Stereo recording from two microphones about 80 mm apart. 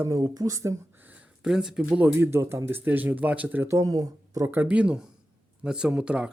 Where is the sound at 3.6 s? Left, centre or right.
Right.